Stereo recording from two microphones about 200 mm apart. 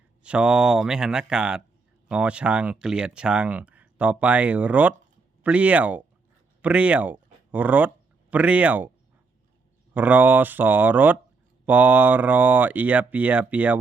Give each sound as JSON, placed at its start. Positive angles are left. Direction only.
{"t": 0.2, "sound": "speech", "side_deg": -5}
{"t": 9.9, "sound": "speech", "side_deg": -10}